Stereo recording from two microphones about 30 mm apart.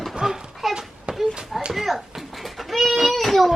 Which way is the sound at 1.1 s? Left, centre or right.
Right.